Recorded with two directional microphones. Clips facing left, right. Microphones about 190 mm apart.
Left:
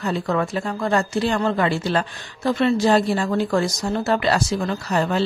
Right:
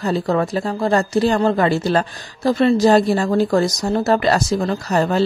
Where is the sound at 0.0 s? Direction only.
35° right (ahead or behind).